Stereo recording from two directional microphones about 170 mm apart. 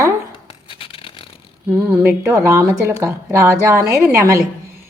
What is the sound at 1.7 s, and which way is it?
Speech, 15° right (ahead or behind).